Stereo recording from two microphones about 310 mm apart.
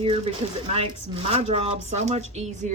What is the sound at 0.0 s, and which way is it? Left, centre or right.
Speech, centre.